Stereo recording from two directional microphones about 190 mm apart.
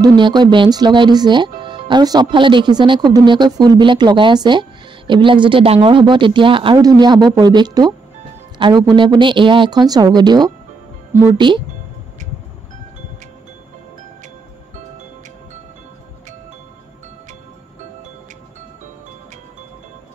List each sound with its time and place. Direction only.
0.0 s speech: 25° right (ahead or behind)